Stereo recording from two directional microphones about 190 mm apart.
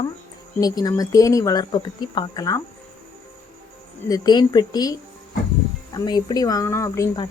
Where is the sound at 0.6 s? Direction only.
20° left (ahead or behind).